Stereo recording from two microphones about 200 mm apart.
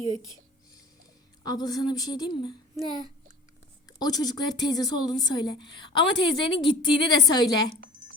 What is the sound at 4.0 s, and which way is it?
A woman's voice, 20° left (ahead or behind).